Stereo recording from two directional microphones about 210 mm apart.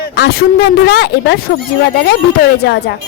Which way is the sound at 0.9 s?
50° left (ahead or behind).